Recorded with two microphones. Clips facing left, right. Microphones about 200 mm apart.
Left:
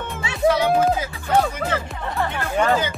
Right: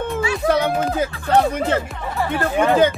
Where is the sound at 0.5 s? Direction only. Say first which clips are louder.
Left 3 dB; 55° right (ahead or behind).